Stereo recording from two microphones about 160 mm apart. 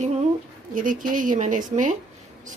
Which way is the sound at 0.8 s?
55° right (ahead or behind).